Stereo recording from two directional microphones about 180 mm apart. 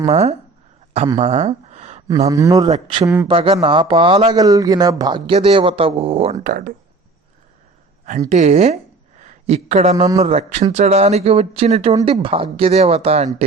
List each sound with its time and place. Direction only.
0.1 s speech: 35° right (ahead or behind)
1.2 s a sound: 40° right (ahead or behind)
2.0 s speech: 20° right (ahead or behind)
2.6 s speech: 30° right (ahead or behind)
4.4 s speech: 20° right (ahead or behind)
6.4 s speech: 50° right (ahead or behind)
8.3 s speech: 40° right (ahead or behind)
9.9 s speech: 20° right (ahead or behind)
10.2 s speech: 35° right (ahead or behind)